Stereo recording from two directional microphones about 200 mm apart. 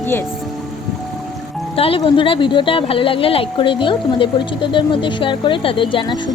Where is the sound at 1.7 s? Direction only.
30° left (ahead or behind).